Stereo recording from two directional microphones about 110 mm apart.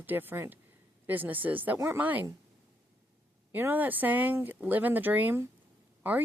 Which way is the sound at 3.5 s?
15° right (ahead or behind).